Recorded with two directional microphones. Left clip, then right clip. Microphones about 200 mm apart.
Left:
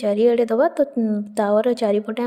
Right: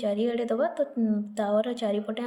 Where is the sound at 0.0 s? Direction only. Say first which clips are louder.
Left 10 dB; 45° left (ahead or behind).